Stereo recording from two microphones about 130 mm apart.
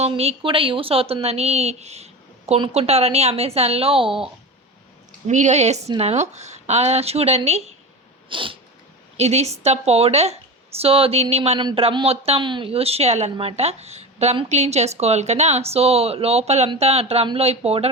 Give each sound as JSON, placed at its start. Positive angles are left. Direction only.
{"t": 0.1, "sound": "speech", "side_deg": -45}
{"t": 5.3, "sound": "speech", "side_deg": -65}
{"t": 8.3, "sound": "cat", "side_deg": -40}
{"t": 9.1, "sound": "speech", "side_deg": -55}